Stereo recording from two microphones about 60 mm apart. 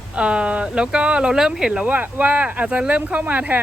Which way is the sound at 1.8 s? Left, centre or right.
Right.